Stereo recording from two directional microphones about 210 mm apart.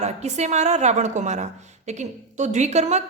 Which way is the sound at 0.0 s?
30° right (ahead or behind).